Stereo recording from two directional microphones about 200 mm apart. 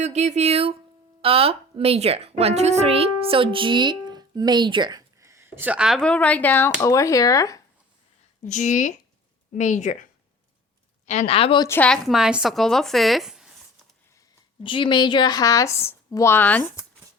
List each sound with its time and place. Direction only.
0.0 s speech: 35° right (ahead or behind); by 7.6 s 15° left (ahead or behind)
8.4 s a woman's voice: 40° left (ahead or behind)
11.7 s speech: 5° left (ahead or behind)
14.6 s speech: 25° left (ahead or behind); by 16.8 s 10° left (ahead or behind)